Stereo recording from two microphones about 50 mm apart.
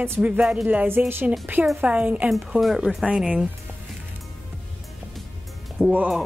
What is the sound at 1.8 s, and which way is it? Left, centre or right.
Speech, right.